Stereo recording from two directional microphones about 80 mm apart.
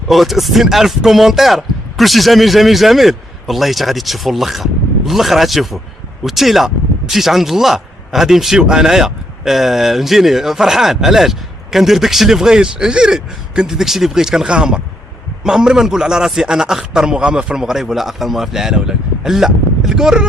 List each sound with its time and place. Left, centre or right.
0.1 s a man's voice: centre